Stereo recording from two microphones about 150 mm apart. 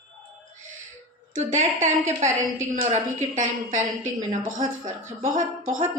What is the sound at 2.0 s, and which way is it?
Speech, 20° right (ahead or behind).